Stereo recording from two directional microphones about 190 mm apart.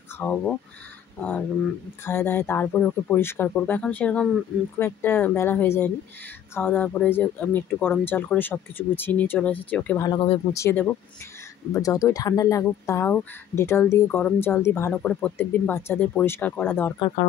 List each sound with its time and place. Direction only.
0.2 s speech: 5° left (ahead or behind)
10.0 s speech: 25° left (ahead or behind)
10.5 s speech: 15° left (ahead or behind)